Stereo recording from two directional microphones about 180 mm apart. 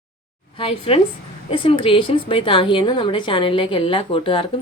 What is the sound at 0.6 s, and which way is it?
A woman's voice, 30° left (ahead or behind).